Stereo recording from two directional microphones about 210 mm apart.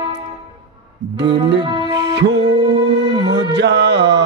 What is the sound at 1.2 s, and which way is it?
Music, 55° right (ahead or behind).